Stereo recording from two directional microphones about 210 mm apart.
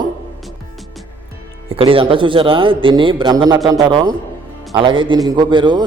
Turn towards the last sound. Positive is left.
turn(degrees=-20)  # may be behind; listen again after turning